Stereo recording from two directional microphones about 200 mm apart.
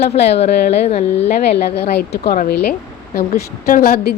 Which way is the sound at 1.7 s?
55° left (ahead or behind).